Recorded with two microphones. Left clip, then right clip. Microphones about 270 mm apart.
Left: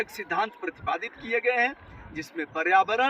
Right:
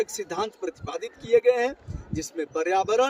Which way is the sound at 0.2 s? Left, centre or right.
Centre.